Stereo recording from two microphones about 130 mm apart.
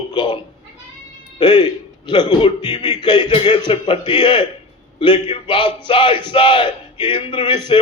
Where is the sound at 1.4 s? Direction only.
35° left (ahead or behind).